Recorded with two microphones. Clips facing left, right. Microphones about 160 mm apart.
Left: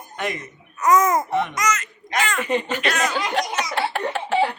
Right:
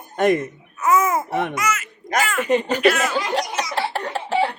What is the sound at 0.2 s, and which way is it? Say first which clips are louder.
Speech: right 11 dB; 50° right (ahead or behind).